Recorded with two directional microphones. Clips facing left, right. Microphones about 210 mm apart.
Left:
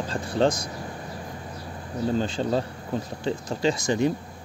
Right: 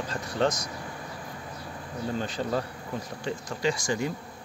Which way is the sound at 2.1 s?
30° left (ahead or behind).